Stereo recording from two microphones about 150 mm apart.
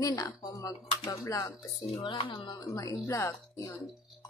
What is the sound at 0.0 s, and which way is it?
Speech, 20° left (ahead or behind).